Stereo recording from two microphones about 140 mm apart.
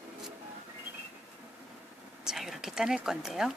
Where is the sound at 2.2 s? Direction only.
5° right (ahead or behind).